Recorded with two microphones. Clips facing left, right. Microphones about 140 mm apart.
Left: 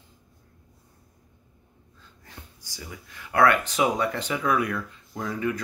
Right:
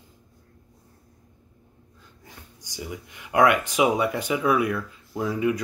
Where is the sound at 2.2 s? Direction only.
15° right (ahead or behind).